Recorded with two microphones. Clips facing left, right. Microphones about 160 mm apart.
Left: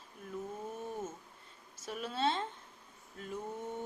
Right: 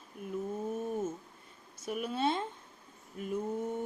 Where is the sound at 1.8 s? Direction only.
10° right (ahead or behind).